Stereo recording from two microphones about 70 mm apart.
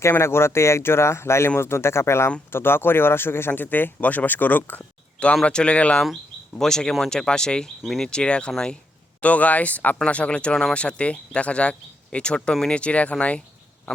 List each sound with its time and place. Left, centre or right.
0.0 s speech: left
5.3 s speech: centre
9.2 s speech: left